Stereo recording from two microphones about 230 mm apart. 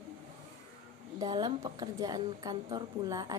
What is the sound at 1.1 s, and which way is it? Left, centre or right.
A woman's voice, centre.